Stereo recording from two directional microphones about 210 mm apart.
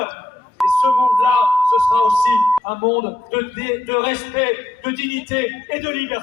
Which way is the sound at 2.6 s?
25° left (ahead or behind).